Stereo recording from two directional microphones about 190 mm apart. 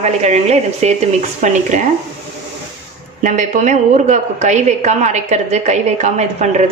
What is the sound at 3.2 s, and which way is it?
Speech, 40° right (ahead or behind).